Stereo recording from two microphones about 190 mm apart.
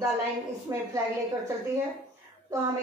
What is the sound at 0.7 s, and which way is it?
Speech, 15° right (ahead or behind).